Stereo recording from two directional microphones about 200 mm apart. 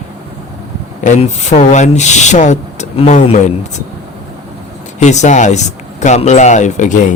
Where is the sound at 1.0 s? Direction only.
35° left (ahead or behind).